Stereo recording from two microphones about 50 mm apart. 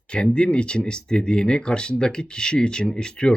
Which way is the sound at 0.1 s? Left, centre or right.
Centre.